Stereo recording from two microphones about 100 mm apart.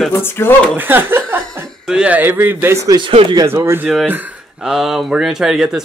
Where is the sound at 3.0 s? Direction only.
70° right (ahead or behind).